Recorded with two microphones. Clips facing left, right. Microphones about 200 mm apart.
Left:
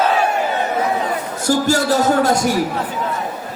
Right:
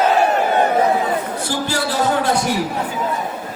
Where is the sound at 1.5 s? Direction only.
45° left (ahead or behind).